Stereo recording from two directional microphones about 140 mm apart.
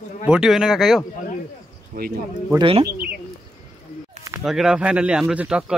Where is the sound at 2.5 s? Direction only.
40° right (ahead or behind).